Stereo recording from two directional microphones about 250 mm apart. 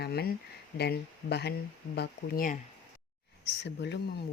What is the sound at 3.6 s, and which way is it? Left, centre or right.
Speech, left.